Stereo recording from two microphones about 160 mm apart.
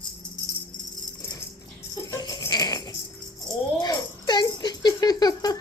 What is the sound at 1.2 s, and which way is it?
Dog, 20° left (ahead or behind).